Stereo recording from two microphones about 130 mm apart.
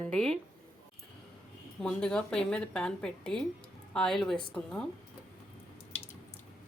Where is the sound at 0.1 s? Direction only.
5° left (ahead or behind).